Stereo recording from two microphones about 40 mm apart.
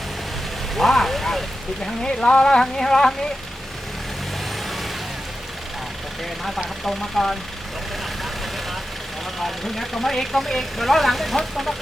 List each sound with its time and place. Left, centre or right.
0.8 s a sound: centre
2.0 s speech: left
6.8 s speech: centre
9.4 s speech: centre